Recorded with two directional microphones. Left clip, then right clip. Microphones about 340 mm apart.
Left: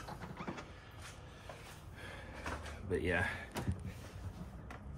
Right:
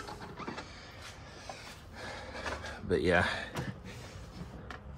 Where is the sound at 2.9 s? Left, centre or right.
Centre.